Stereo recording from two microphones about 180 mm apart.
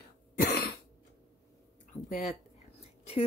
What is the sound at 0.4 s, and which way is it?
Cough, 55° left (ahead or behind).